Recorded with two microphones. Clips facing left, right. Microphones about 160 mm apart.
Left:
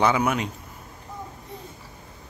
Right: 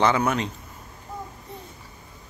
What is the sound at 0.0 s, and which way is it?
Speech, 10° left (ahead or behind).